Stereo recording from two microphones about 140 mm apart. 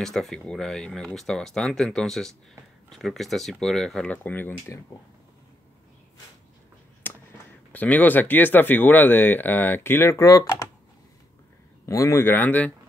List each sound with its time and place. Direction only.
0.0 s speech: centre (ahead or behind)
7.0 s a sound: 15° left (ahead or behind)
7.7 s speech: 10° left (ahead or behind)
11.8 s speech: 20° left (ahead or behind)